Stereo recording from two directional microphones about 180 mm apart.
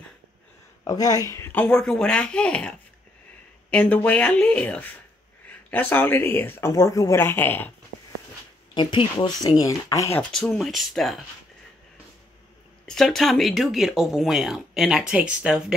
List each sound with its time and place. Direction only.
0.8 s speech: 20° left (ahead or behind)
8.7 s speech: 25° left (ahead or behind)
10.3 s speech: 5° left (ahead or behind)
12.8 s speech: centre (ahead or behind)